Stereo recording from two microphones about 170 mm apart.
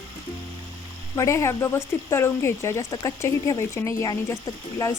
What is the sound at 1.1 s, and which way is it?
A woman's voice, 15° left (ahead or behind).